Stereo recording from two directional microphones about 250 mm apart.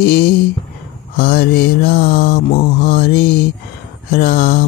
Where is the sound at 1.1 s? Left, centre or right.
Left.